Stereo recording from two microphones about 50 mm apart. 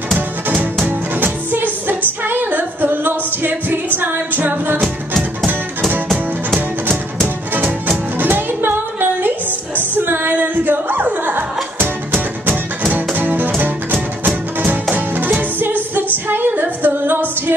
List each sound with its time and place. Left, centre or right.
0.8 s music: right
4.8 s music: centre
8.2 s music: right
10.3 s singing: right
11.1 s music: right
16.3 s female singing: right